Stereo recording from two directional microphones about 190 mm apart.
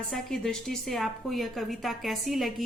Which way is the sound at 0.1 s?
5° left (ahead or behind).